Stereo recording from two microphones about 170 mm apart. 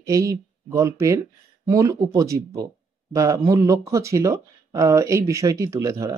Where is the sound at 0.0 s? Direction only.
20° right (ahead or behind).